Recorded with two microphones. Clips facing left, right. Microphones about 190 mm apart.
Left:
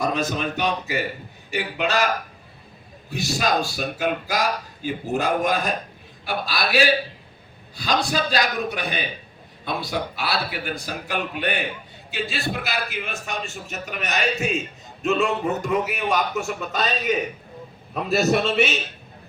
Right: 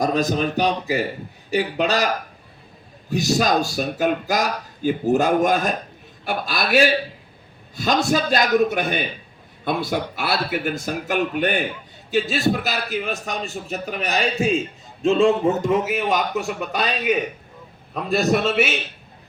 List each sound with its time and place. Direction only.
0.0 s a man's voice: 40° right (ahead or behind)
3.1 s a man's voice: 40° right (ahead or behind); by 16.9 s 15° right (ahead or behind)
17.9 s a man's voice: 5° left (ahead or behind)